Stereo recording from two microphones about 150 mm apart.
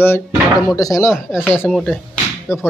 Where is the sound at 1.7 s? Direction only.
5° left (ahead or behind).